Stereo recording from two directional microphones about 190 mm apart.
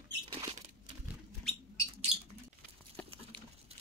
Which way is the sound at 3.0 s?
5° left (ahead or behind).